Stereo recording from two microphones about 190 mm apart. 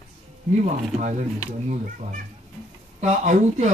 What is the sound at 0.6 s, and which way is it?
Speech, 40° right (ahead or behind).